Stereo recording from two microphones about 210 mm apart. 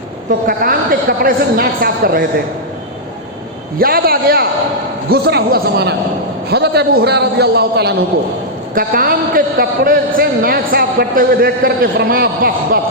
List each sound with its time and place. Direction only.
0.3 s a man's voice: 45° right (ahead or behind)
3.8 s a man's voice: 45° right (ahead or behind)